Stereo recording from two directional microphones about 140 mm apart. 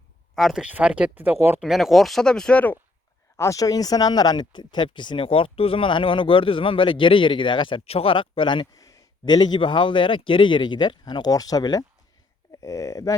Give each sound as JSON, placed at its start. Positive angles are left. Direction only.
{"t": 0.3, "sound": "speech", "side_deg": 0}
{"t": 1.6, "sound": "speech", "side_deg": 0}
{"t": 3.3, "sound": "speech", "side_deg": 20}